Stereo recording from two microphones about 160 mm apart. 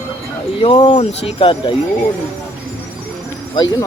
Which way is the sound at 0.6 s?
35° left (ahead or behind).